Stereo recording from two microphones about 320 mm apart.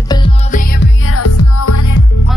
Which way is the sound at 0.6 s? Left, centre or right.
Left.